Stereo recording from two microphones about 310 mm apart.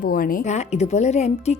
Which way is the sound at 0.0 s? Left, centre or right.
Left.